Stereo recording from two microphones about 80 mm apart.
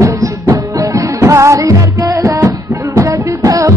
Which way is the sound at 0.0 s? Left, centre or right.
Right.